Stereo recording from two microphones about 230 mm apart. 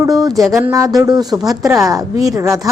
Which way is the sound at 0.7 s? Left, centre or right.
Centre.